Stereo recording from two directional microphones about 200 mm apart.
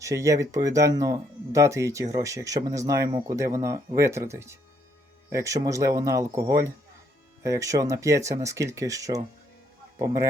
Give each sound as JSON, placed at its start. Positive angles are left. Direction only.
{"t": 0.0, "sound": "speech", "side_deg": -15}